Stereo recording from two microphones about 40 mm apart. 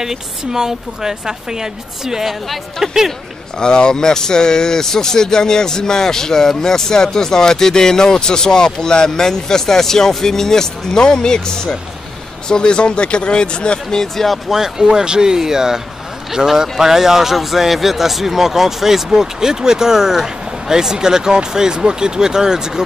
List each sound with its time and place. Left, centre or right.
0.0 s speech: centre
2.4 s speech: centre
3.5 s speech: left
14.5 s speech: centre